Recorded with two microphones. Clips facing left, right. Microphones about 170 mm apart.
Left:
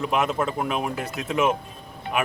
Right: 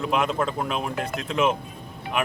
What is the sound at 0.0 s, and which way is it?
Speech, 5° left (ahead or behind).